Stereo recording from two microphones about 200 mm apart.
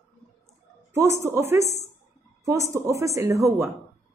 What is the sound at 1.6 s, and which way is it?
Speech, 35° left (ahead or behind).